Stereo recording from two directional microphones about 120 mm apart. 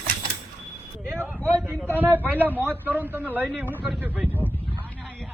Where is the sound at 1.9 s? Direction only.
15° right (ahead or behind).